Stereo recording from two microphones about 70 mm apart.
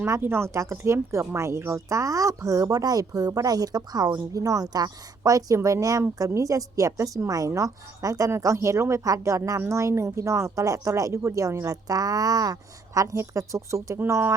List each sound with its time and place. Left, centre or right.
0.2 s speech: right
4.3 s a woman's voice: right